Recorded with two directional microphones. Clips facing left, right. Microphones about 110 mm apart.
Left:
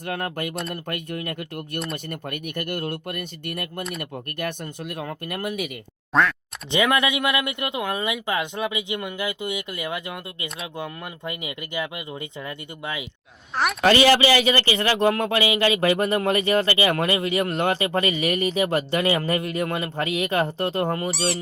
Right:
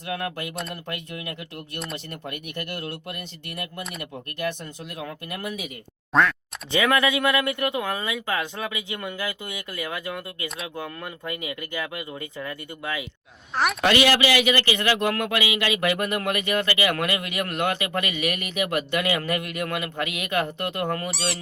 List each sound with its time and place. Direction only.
0.0 s speech: 50° left (ahead or behind)
6.1 s speech: centre (ahead or behind)
6.7 s speech: 20° left (ahead or behind)
13.5 s speech: centre (ahead or behind)
13.9 s speech: 30° left (ahead or behind)
21.1 s speech: centre (ahead or behind)